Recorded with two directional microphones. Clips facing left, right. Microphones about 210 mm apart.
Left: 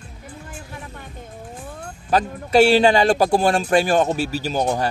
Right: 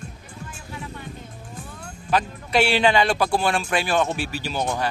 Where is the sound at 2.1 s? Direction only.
40° left (ahead or behind).